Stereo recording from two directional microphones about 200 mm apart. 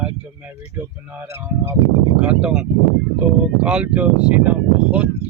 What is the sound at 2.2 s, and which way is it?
Speech, 5° right (ahead or behind).